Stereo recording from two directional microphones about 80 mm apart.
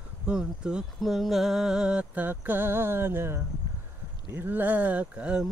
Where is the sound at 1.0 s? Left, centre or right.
Centre.